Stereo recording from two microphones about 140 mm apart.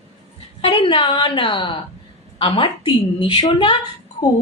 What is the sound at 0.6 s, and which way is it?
A woman's voice, 40° left (ahead or behind).